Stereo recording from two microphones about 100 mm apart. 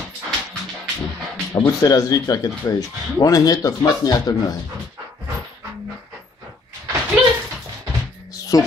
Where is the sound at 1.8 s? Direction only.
35° left (ahead or behind).